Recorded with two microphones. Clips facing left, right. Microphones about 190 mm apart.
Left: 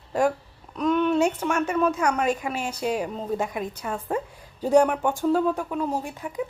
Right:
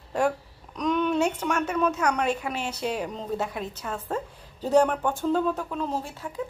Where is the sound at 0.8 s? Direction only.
5° left (ahead or behind).